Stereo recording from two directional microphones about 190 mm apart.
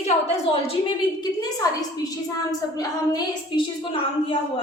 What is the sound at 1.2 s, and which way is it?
A woman's voice, 20° left (ahead or behind).